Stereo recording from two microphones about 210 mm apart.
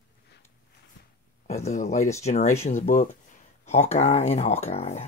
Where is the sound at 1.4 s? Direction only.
35° left (ahead or behind).